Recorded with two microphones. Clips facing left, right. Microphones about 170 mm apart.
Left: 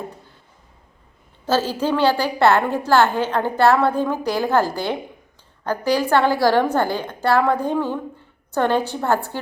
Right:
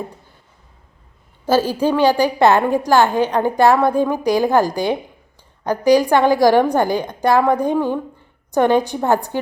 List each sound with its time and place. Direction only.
1.5 s a woman's voice: 10° right (ahead or behind)